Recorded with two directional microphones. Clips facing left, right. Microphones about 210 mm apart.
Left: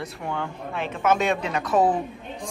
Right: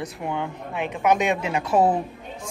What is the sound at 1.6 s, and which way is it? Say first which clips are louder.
Speech: right 1 dB; 30° right (ahead or behind).